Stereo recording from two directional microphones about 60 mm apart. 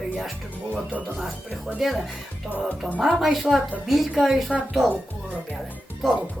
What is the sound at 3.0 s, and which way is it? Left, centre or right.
Speech, centre.